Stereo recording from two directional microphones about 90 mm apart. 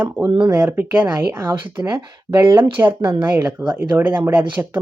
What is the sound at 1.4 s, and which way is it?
Speech, 40° right (ahead or behind).